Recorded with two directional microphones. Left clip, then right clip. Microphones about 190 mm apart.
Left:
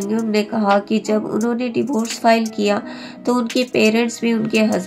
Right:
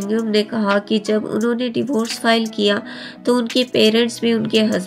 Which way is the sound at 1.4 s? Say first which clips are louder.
Right 1 dB; centre (ahead or behind).